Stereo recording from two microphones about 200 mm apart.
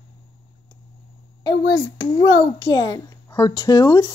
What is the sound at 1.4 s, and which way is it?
Speech, 20° left (ahead or behind).